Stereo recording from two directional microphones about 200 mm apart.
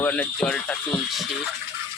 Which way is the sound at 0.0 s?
5° left (ahead or behind).